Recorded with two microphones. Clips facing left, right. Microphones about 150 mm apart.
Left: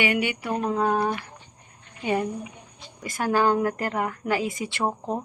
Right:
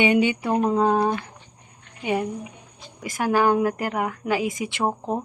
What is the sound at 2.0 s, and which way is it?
Speech, 10° right (ahead or behind).